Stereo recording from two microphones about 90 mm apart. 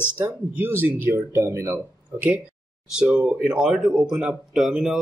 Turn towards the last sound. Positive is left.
turn(degrees=-5)  # may be behind; listen again after turning